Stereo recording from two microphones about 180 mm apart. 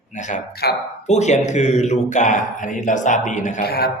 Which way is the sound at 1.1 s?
40° left (ahead or behind).